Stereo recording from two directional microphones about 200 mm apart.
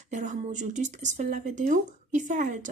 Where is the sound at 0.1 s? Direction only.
35° right (ahead or behind).